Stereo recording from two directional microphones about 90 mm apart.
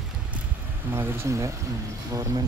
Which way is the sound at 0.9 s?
25° right (ahead or behind).